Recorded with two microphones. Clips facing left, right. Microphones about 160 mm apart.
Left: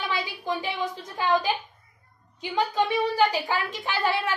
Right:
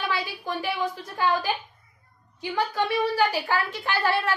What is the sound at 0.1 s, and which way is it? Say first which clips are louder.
A woman's voice: even; 20° left (ahead or behind).